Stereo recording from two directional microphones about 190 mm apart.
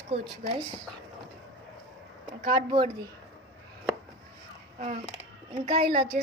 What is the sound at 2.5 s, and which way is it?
Speech, 25° right (ahead or behind).